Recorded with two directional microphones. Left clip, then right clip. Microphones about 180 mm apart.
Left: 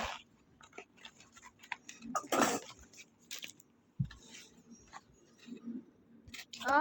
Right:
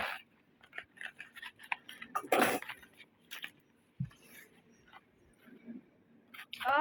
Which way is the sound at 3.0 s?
60° left (ahead or behind).